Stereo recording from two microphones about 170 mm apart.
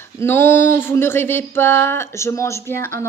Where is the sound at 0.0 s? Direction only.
15° left (ahead or behind).